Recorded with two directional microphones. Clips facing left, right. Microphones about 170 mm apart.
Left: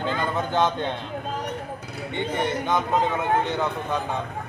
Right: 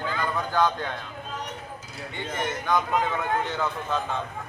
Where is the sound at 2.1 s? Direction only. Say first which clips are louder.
Left 5 dB; 25° left (ahead or behind).